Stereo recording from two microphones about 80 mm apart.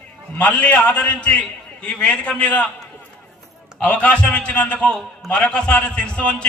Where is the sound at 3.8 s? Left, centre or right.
Centre.